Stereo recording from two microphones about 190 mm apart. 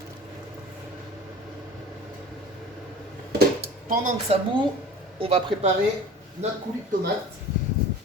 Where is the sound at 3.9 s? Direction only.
45° right (ahead or behind).